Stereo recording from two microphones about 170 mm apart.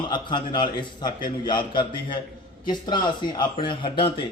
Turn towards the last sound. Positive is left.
turn(degrees=30)  # may be behind; listen again after turning